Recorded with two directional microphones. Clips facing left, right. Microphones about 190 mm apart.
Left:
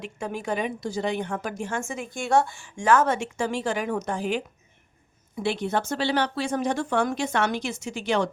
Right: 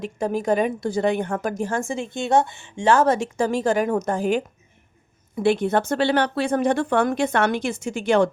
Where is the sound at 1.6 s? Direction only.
35° right (ahead or behind).